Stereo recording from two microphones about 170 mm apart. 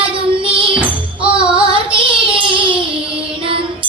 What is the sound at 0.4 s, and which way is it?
Music, 30° right (ahead or behind).